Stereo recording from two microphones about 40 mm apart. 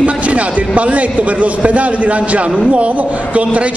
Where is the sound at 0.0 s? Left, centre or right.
Right.